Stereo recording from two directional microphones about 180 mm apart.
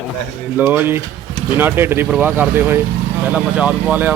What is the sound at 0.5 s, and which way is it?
Speech, 10° right (ahead or behind).